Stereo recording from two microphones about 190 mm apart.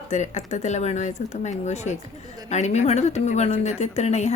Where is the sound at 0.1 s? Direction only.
40° left (ahead or behind).